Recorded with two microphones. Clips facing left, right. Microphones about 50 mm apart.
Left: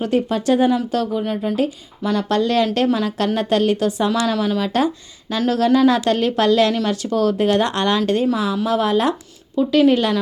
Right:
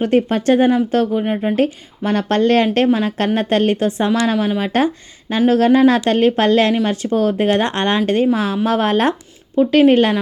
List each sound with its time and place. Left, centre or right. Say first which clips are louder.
0.0 s a woman's voice: right 4 dB; right
2.0 s a woman's voice: right 3 dB; right
2.7 s a woman's voice: right 3 dB; right